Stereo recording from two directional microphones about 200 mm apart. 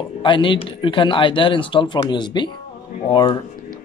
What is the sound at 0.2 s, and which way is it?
Speech, 25° left (ahead or behind).